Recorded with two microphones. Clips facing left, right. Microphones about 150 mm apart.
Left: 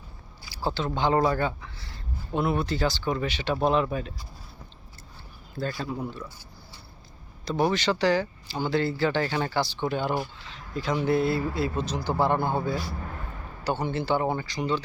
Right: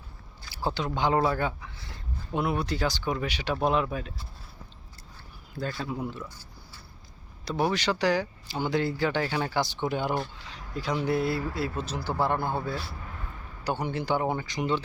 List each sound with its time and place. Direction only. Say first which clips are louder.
0.6 s speech: left 1 dB; 15° right (ahead or behind)
5.6 s speech: left 2 dB; centre (ahead or behind)
6.0 s speech: even; 15° right (ahead or behind)
7.4 s speech: left 2 dB; 5° right (ahead or behind)
13.7 s speech: left 2 dB; 10° right (ahead or behind)